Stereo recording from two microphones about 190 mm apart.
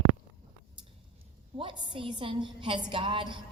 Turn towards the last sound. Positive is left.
turn(degrees=-25)  # may be behind; listen again after turning